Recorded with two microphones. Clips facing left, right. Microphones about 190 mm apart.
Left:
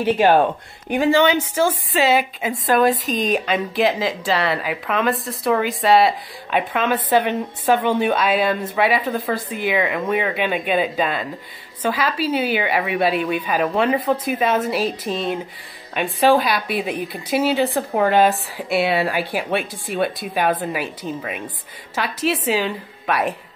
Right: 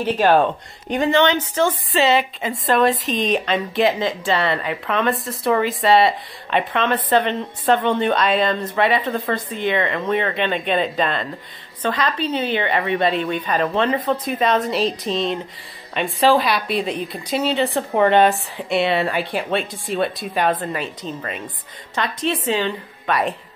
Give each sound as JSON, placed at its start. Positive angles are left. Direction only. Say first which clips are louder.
{"t": 0.0, "sound": "a woman's voice", "louder": "left 1 dB", "side_deg": 10}